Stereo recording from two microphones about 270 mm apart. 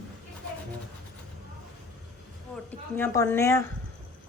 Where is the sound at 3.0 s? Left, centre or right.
Centre.